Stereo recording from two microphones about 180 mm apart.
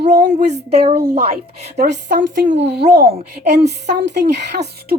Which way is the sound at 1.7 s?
70° right (ahead or behind).